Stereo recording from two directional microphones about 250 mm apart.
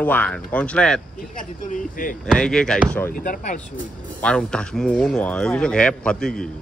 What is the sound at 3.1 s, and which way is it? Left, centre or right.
Speech, left.